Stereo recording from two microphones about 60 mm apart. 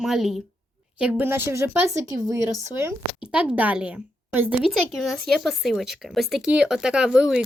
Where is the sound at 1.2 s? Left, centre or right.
Right.